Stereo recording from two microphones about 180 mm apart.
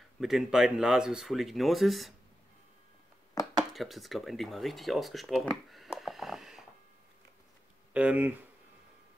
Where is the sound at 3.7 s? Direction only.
Centre (ahead or behind).